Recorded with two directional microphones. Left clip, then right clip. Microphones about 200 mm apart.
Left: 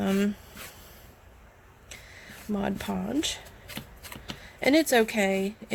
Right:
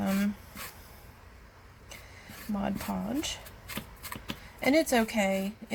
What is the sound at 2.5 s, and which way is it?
Speech, 50° left (ahead or behind).